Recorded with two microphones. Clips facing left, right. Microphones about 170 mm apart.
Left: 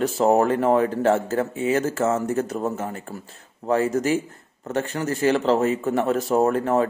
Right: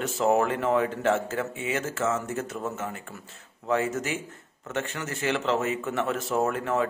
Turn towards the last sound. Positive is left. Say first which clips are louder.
# left 6 dB
turn(degrees=40)  # may be behind; listen again after turning